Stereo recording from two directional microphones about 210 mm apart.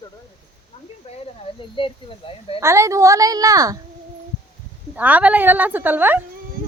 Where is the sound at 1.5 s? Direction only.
25° left (ahead or behind).